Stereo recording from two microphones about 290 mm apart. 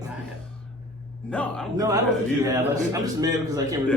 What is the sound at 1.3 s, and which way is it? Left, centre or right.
Speech, centre.